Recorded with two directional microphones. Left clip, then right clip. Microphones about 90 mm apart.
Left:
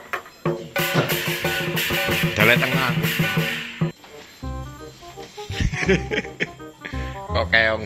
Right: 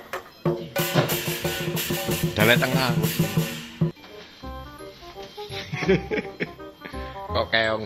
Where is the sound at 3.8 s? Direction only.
30° right (ahead or behind).